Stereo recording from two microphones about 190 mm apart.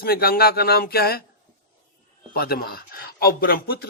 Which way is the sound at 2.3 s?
55° left (ahead or behind).